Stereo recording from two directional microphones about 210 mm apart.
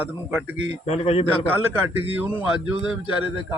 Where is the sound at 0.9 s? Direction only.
30° left (ahead or behind).